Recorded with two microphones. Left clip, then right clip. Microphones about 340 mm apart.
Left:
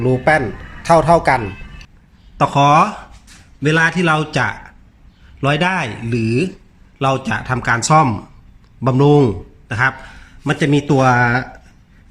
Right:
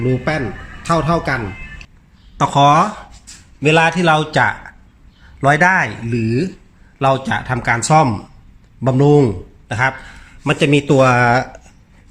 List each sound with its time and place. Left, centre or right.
0.9 s a man's voice: centre
2.4 s a man's voice: centre